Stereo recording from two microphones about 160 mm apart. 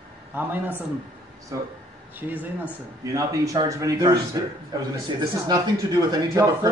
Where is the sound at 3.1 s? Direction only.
20° right (ahead or behind).